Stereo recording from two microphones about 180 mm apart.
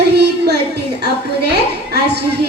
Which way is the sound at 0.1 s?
65° right (ahead or behind).